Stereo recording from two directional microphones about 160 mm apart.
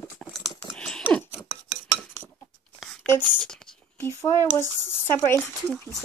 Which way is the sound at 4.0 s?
15° left (ahead or behind).